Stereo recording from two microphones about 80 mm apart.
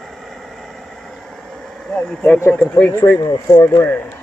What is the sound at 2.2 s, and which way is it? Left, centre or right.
Speech, left.